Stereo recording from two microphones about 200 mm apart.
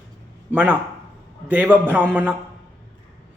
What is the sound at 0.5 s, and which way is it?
A man's voice, 10° right (ahead or behind).